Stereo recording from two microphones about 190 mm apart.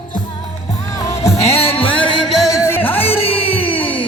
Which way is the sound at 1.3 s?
35° left (ahead or behind).